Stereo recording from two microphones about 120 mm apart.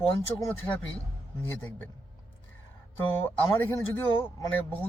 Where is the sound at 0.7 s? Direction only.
35° left (ahead or behind).